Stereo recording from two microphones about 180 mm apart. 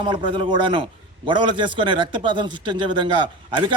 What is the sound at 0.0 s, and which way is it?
A man's voice, 25° right (ahead or behind).